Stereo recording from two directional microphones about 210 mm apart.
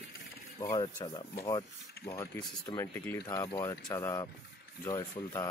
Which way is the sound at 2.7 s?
15° left (ahead or behind).